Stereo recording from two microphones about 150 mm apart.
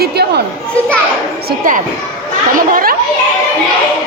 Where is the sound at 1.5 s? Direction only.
60° right (ahead or behind).